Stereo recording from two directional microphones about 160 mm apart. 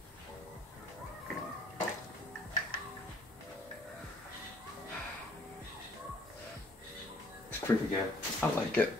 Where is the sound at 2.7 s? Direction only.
65° left (ahead or behind).